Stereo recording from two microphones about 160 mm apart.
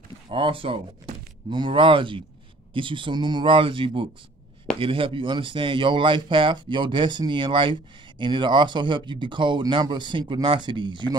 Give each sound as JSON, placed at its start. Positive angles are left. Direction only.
{"t": 0.3, "sound": "speech", "side_deg": -35}